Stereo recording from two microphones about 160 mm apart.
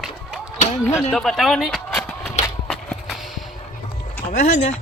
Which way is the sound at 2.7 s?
Centre (ahead or behind).